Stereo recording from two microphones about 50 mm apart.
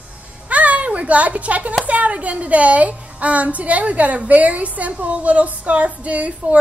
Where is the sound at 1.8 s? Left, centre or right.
Right.